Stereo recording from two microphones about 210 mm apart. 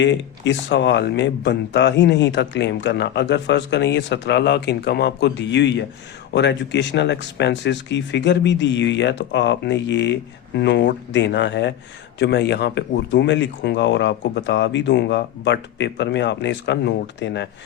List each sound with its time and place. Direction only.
0.0 s speech: 60° left (ahead or behind)